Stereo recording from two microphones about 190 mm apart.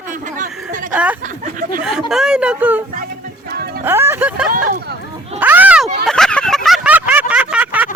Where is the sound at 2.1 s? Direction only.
5° right (ahead or behind).